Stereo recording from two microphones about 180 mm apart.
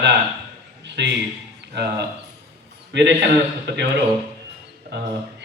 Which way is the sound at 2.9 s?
75° right (ahead or behind).